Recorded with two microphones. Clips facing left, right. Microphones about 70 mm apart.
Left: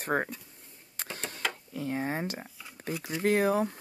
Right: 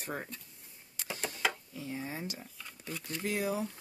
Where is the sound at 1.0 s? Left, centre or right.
Left.